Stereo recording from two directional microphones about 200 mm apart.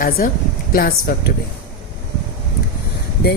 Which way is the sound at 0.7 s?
50° left (ahead or behind).